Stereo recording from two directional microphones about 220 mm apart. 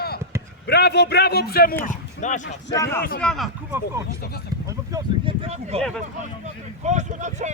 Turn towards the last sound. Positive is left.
turn(degrees=-35)  # may be behind; listen again after turning